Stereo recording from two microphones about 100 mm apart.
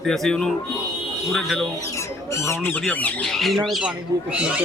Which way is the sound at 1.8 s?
30° left (ahead or behind).